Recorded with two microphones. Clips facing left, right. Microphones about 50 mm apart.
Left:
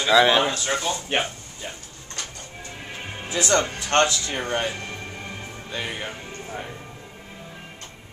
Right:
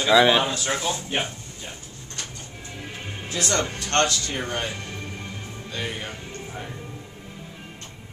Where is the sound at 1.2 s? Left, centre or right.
Centre.